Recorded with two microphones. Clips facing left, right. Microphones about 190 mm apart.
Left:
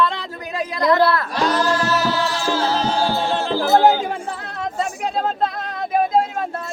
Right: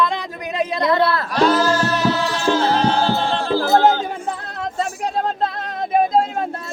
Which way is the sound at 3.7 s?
10° left (ahead or behind).